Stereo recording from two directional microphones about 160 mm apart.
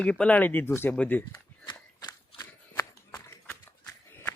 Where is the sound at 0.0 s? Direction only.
5° left (ahead or behind).